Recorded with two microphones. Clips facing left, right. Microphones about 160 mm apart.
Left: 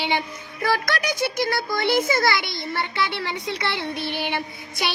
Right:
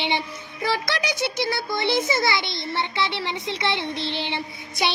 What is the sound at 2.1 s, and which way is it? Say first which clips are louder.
Child singing: left 2 dB; 25° right (ahead or behind).